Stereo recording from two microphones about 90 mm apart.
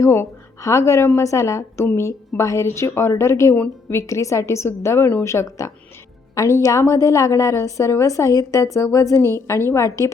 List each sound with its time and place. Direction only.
0.0 s a woman's voice: 30° left (ahead or behind)
4.0 s a woman's voice: 35° left (ahead or behind)